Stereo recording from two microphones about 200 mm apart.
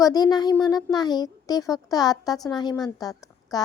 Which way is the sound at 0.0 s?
20° left (ahead or behind).